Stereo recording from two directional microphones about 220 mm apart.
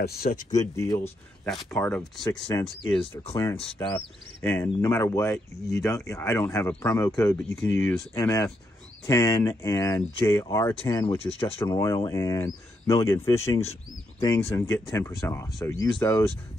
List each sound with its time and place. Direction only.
0.0 s speech: 45° left (ahead or behind)
0.5 s speech: 15° left (ahead or behind)
1.4 s speech: 5° left (ahead or behind)
2.4 s speech: 20° left (ahead or behind)
4.4 s speech: 10° left (ahead or behind)